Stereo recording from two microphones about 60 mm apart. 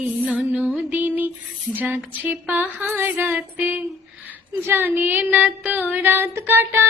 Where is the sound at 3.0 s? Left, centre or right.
Right.